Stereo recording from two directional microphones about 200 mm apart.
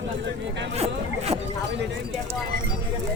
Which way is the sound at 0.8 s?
30° right (ahead or behind).